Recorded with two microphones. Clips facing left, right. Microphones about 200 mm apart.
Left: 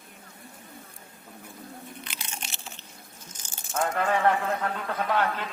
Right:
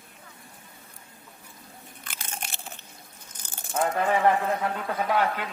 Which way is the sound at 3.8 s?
15° right (ahead or behind).